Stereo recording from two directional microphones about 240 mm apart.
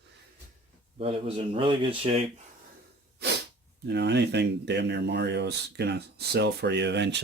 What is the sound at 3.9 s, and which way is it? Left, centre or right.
Speech, right.